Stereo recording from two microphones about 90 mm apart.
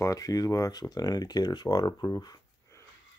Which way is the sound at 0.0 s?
40° left (ahead or behind).